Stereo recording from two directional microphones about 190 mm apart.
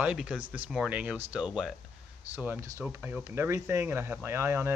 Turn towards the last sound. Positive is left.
turn(degrees=-15)  # may be behind; listen again after turning